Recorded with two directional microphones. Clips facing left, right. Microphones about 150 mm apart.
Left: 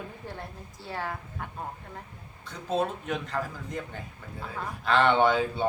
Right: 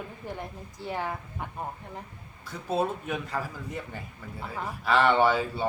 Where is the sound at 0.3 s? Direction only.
15° right (ahead or behind).